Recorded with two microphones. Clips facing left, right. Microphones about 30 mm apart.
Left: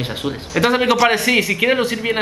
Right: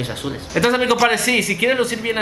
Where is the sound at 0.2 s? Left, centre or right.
Centre.